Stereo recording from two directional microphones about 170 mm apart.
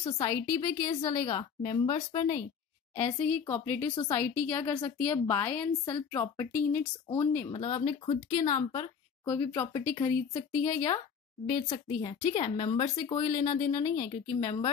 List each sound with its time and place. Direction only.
0.0 s a woman's voice: 25° left (ahead or behind)
3.0 s speech: 15° left (ahead or behind)
7.7 s speech: 40° left (ahead or behind)
8.5 s a woman's voice: 20° left (ahead or behind)
13.9 s speech: 50° left (ahead or behind)